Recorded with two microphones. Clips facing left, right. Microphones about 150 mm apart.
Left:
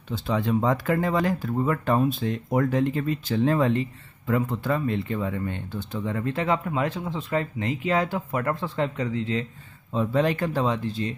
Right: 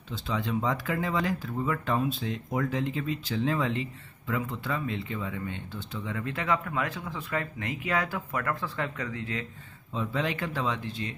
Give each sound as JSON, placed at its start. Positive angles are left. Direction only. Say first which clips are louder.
{"t": 0.1, "sound": "speech", "louder": "left 6 dB", "side_deg": 50}
{"t": 9.9, "sound": "speech", "louder": "left 7 dB", "side_deg": 45}